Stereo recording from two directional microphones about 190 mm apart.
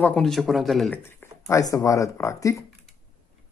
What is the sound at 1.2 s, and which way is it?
Speech, 15° left (ahead or behind).